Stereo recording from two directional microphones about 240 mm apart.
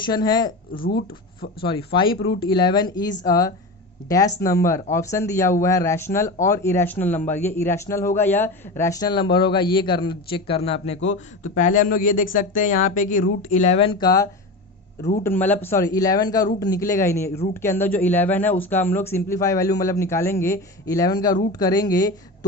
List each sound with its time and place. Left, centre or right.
0.0 s speech: centre
0.7 s speech: left
1.6 s a man's voice: left